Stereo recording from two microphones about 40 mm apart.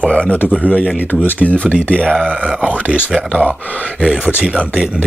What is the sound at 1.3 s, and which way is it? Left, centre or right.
Speech, left.